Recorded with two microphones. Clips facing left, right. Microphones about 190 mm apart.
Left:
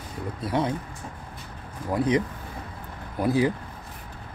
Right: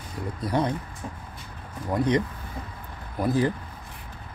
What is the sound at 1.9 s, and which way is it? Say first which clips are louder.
Speech: even; 5° left (ahead or behind).